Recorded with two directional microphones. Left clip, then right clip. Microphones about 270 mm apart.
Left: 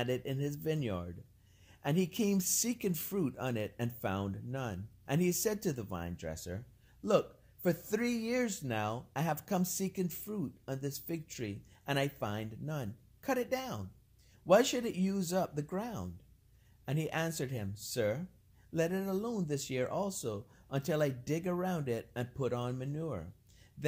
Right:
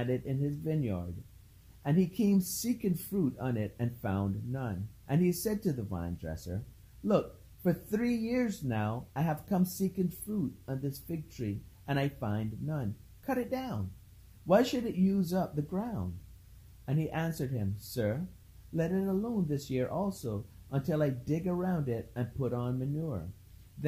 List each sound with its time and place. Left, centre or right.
0.0 s speech: left